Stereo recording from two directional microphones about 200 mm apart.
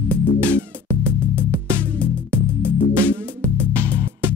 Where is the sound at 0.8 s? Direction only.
10° right (ahead or behind).